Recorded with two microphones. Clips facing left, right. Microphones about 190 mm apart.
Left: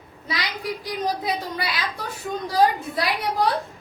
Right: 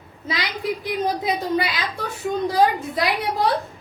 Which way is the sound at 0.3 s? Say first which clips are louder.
Right 3 dB; 25° right (ahead or behind).